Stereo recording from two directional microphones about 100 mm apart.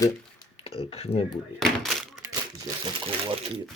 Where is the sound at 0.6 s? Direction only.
70° left (ahead or behind).